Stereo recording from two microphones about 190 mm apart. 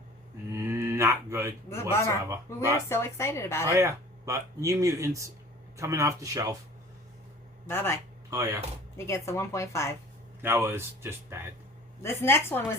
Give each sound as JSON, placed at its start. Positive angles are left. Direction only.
{"t": 0.5, "sound": "mantra", "side_deg": -15}
{"t": 1.7, "sound": "a woman's voice", "side_deg": 15}
{"t": 3.7, "sound": "speech", "side_deg": -15}
{"t": 7.7, "sound": "a woman's voice", "side_deg": 15}
{"t": 8.3, "sound": "speech", "side_deg": -15}
{"t": 9.0, "sound": "a woman's voice", "side_deg": 15}
{"t": 10.4, "sound": "speech", "side_deg": -10}
{"t": 12.0, "sound": "a woman's voice", "side_deg": 10}